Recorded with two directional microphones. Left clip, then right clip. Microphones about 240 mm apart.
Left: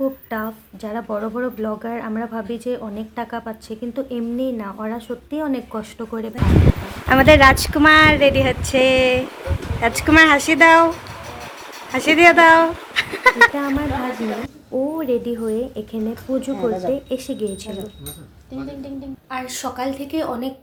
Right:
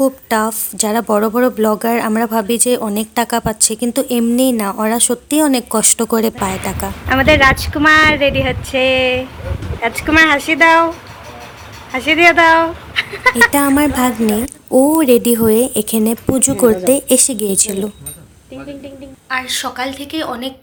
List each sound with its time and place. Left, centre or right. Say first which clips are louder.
0.0 s speech: right 9 dB; right
7.1 s speech: even; centre
13.6 s speech: right 9 dB; right
19.3 s speech: right 8 dB; centre